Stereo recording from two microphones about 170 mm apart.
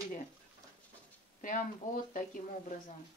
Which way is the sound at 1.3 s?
50° left (ahead or behind).